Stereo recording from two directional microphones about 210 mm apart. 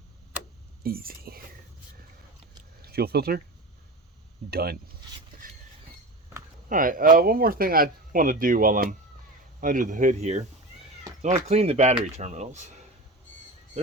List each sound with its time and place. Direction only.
0.8 s speech: 45° right (ahead or behind)
2.8 s speech: 50° right (ahead or behind)
4.5 s speech: 50° right (ahead or behind)
5.4 s vehicle: 40° right (ahead or behind)
6.7 s speech: 40° right (ahead or behind)